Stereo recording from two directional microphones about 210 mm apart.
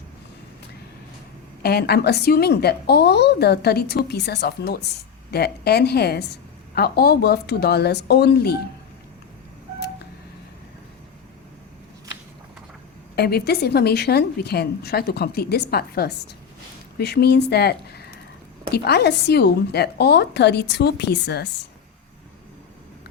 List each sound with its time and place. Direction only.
1.6 s a woman's voice: 50° left (ahead or behind)
13.1 s a woman's voice: 50° left (ahead or behind)